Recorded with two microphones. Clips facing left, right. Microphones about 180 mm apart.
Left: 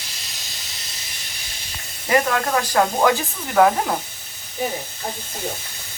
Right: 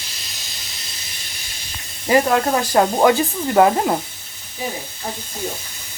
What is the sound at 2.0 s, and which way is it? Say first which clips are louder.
Speech: right 4 dB; 30° right (ahead or behind).